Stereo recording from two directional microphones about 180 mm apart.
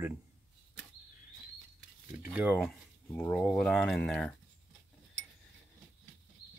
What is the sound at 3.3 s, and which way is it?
Cutlery, centre (ahead or behind).